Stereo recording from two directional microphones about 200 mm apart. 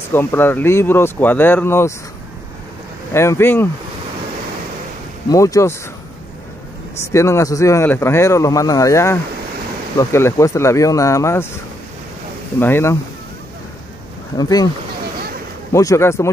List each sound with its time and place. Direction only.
0.1 s speech: 10° left (ahead or behind)
3.1 s speech: 15° left (ahead or behind)
5.3 s speech: 15° left (ahead or behind)
7.0 s speech: 15° left (ahead or behind)
12.5 s speech: 10° left (ahead or behind)
14.3 s speech: 20° left (ahead or behind)
15.1 s a sound: 50° right (ahead or behind)
15.7 s speech: 15° left (ahead or behind)